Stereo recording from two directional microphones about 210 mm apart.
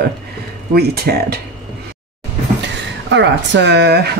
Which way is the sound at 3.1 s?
55° right (ahead or behind).